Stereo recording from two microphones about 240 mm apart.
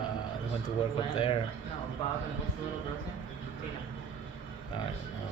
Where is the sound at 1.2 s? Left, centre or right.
Left.